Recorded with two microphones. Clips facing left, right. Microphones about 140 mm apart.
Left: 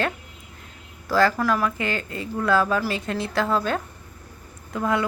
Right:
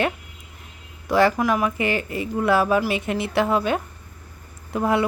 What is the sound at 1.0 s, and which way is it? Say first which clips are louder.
Speech: right 2 dB; 25° right (ahead or behind).